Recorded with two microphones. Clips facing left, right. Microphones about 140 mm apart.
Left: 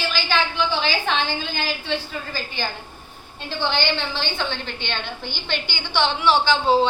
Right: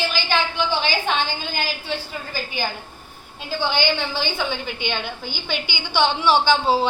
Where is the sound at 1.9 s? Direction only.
10° right (ahead or behind).